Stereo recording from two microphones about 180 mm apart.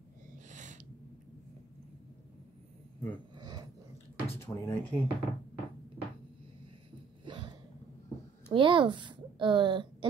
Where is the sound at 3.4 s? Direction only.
25° right (ahead or behind).